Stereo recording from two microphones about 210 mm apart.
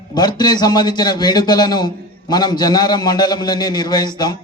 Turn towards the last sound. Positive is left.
turn(degrees=20)  # may be behind; listen again after turning